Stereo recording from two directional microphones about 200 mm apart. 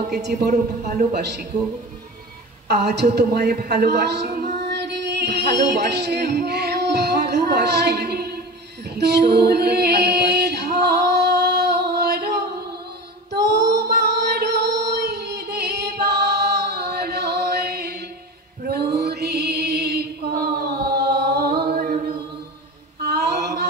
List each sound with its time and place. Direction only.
0.2 s a man's voice: 55° right (ahead or behind)
2.7 s a woman's voice: 55° right (ahead or behind)
4.6 s music: 55° right (ahead or behind)
8.9 s a capella: 55° right (ahead or behind)
13.7 s music: 55° right (ahead or behind)
22.9 s a sound: 55° right (ahead or behind)